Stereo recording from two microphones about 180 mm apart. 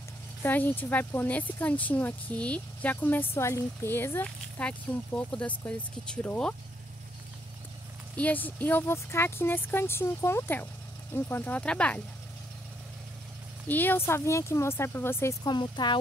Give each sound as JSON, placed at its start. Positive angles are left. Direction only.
{"t": 0.4, "sound": "speech", "side_deg": 10}
{"t": 8.2, "sound": "speech", "side_deg": 10}
{"t": 13.7, "sound": "speech", "side_deg": 10}